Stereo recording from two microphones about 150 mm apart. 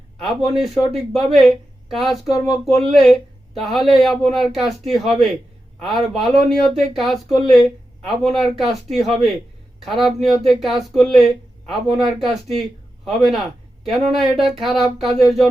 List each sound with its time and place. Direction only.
0.5 s speech: centre (ahead or behind)